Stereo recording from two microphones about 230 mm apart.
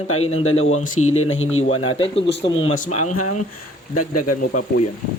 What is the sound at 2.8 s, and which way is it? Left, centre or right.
Speech, left.